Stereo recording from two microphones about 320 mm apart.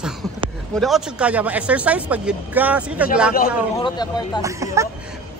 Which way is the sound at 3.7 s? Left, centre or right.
Centre.